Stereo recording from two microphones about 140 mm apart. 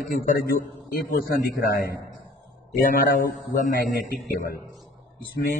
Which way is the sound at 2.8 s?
70° left (ahead or behind).